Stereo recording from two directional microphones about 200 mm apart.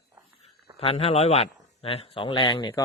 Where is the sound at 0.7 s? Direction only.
30° left (ahead or behind).